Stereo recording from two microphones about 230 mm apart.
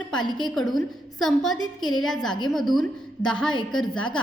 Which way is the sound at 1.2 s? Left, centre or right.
Centre.